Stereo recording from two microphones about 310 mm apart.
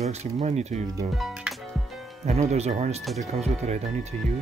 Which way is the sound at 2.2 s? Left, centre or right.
Right.